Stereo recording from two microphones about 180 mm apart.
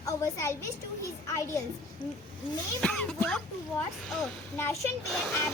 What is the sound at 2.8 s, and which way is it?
Speech, 5° left (ahead or behind).